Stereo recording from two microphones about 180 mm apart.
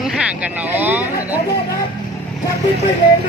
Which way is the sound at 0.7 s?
10° right (ahead or behind).